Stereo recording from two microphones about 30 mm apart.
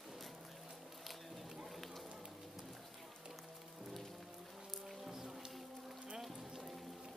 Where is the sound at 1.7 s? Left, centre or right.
Centre.